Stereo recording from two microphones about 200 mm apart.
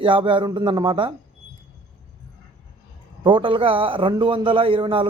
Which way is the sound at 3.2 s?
25° right (ahead or behind).